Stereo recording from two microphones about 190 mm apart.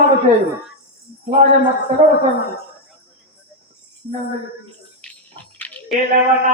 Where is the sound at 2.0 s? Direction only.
35° right (ahead or behind).